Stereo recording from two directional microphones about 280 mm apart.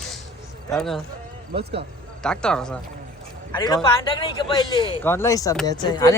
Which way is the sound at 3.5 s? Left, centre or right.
Centre.